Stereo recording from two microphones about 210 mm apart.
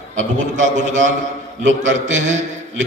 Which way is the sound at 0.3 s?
35° right (ahead or behind).